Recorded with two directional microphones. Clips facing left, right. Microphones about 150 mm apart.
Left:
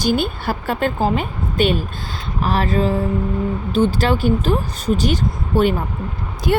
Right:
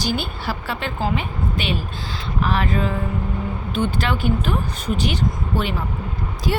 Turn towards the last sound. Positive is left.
turn(degrees=60)  # may be behind; listen again after turning